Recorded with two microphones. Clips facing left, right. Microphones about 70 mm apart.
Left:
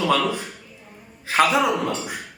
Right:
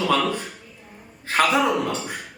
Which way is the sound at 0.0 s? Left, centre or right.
Centre.